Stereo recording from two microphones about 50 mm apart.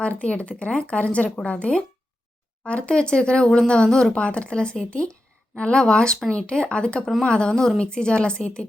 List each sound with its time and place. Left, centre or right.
0.0 s speech: left
4.1 s speech: left